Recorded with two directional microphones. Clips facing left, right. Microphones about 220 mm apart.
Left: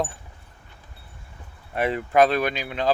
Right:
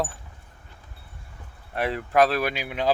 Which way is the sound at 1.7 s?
Centre (ahead or behind).